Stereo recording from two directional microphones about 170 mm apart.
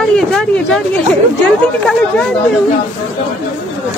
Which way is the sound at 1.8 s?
5° left (ahead or behind).